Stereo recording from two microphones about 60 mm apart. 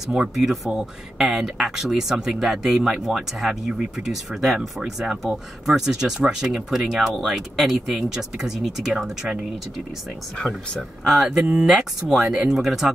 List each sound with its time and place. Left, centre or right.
0.1 s speech: centre
10.3 s speech: centre
11.1 s speech: centre